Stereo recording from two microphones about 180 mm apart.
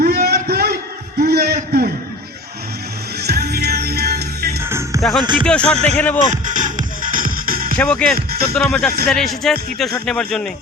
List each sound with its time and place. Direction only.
0.0 s a sound: 60° right (ahead or behind)
3.2 s music: 65° right (ahead or behind)
4.9 s speech: centre (ahead or behind)
5.2 s speech: 25° right (ahead or behind)
5.5 s speech: 5° left (ahead or behind)
6.3 s music: 45° right (ahead or behind)
7.8 s speech: 5° left (ahead or behind)